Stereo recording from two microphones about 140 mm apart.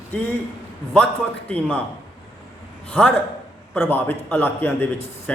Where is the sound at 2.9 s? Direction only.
10° left (ahead or behind).